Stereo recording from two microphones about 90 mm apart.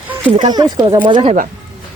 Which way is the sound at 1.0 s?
70° right (ahead or behind).